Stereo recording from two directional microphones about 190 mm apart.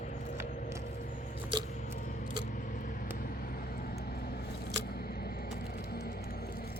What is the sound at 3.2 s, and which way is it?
Vehicle, 50° left (ahead or behind).